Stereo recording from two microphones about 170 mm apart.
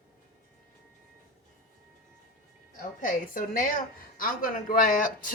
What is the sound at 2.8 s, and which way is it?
A woman's voice, 55° left (ahead or behind).